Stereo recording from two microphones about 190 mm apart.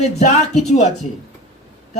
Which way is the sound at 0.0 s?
35° left (ahead or behind).